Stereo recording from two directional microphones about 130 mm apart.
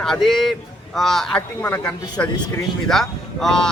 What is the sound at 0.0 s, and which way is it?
A man's voice, centre (ahead or behind).